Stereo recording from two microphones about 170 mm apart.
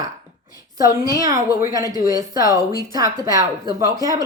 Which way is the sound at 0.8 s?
20° right (ahead or behind).